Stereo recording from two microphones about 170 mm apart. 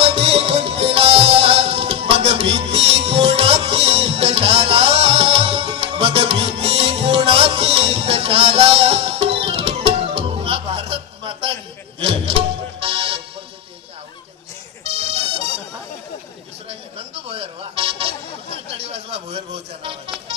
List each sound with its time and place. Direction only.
0.0 s music: 35° right (ahead or behind)
14.8 s music: 40° right (ahead or behind)
16.6 s a sound: 35° right (ahead or behind)